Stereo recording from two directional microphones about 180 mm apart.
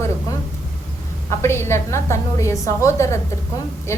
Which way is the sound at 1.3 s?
15° left (ahead or behind).